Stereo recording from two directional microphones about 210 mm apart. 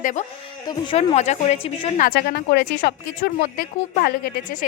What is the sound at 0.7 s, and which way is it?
A woman's voice, 25° left (ahead or behind).